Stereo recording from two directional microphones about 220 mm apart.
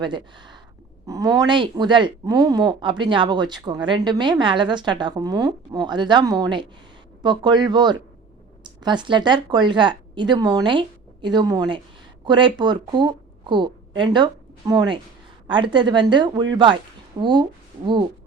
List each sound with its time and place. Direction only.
0.0 s a woman's voice: 20° right (ahead or behind)